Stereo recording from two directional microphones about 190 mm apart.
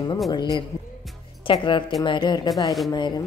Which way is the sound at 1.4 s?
25° left (ahead or behind).